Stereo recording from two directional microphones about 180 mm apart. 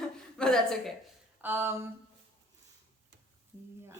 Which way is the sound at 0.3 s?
Centre (ahead or behind).